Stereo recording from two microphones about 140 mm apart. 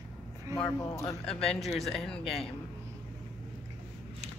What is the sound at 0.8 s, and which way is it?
Speech, 25° left (ahead or behind).